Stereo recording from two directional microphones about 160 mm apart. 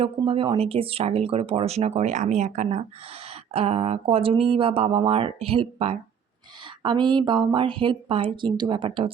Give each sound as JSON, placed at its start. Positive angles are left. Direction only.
{"t": 0.2, "sound": "a woman's voice", "side_deg": -35}